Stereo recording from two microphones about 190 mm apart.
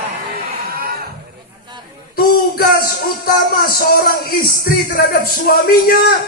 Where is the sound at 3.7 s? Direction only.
50° left (ahead or behind).